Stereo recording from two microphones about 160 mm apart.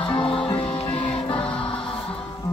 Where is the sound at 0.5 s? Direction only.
35° left (ahead or behind).